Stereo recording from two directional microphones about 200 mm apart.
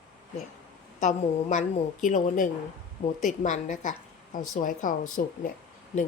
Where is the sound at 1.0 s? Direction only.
40° left (ahead or behind).